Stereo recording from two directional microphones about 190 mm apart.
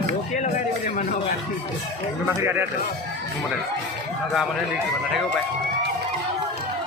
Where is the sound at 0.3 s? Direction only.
40° left (ahead or behind).